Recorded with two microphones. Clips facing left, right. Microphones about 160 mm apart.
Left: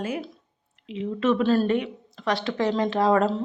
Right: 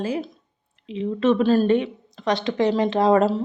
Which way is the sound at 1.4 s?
15° right (ahead or behind).